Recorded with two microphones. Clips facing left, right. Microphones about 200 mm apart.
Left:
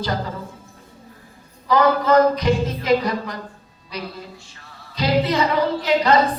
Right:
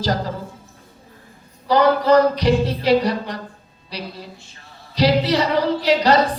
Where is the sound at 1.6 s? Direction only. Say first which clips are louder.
Right 2 dB; 35° right (ahead or behind).